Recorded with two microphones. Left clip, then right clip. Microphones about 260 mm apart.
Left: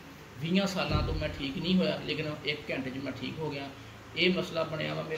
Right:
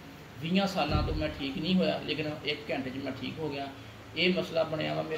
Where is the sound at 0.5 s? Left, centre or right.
Centre.